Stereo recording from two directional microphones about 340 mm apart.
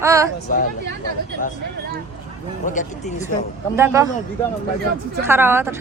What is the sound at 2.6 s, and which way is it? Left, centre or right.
Speech, left.